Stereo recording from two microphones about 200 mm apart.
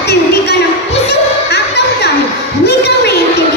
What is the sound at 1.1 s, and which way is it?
Music, 55° left (ahead or behind).